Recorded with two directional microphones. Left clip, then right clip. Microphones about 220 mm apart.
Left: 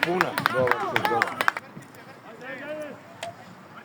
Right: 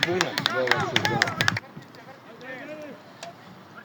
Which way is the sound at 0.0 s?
30° left (ahead or behind).